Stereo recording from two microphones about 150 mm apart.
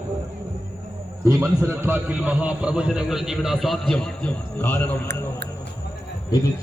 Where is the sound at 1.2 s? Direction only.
20° right (ahead or behind); by 5.2 s 10° left (ahead or behind).